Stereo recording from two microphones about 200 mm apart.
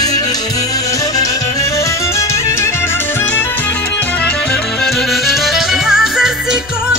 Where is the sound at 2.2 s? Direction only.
15° left (ahead or behind).